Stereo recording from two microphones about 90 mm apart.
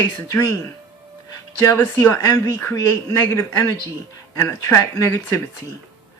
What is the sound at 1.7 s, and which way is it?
Speech, 25° left (ahead or behind).